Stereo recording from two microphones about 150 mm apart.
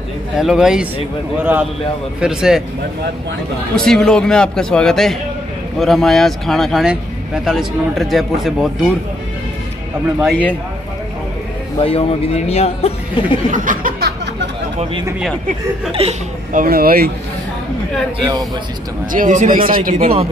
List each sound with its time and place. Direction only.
0.4 s speech: 5° right (ahead or behind)
3.7 s speech: 5° left (ahead or behind)
10.2 s a man's voice: 5° left (ahead or behind)
11.8 s speech: 40° left (ahead or behind)
13.5 s a sound: 65° right (ahead or behind)
15.9 s speech: 40° right (ahead or behind)
16.5 s speech: 80° right
19.1 s speech: 60° right (ahead or behind)